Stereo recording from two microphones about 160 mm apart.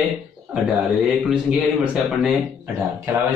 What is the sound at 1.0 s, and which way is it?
Speech, 5° right (ahead or behind).